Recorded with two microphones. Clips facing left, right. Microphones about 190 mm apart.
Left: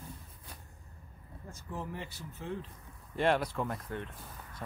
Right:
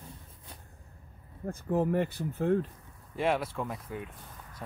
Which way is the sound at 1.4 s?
55° right (ahead or behind).